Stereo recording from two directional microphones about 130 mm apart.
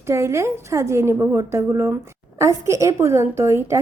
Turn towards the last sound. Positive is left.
turn(degrees=-20)  # may be behind; listen again after turning